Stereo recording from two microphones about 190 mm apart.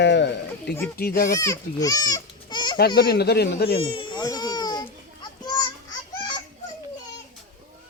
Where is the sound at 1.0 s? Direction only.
50° left (ahead or behind).